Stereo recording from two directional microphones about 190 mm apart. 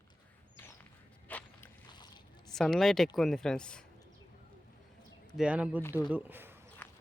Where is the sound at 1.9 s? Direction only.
25° left (ahead or behind).